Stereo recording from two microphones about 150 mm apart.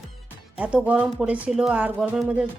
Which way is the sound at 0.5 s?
5° right (ahead or behind).